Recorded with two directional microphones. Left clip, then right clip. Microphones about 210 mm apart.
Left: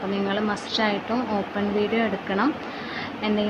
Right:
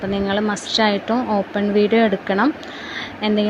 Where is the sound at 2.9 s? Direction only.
25° right (ahead or behind).